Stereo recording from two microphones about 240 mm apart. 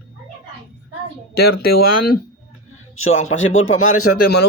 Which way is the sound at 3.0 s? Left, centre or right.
Left.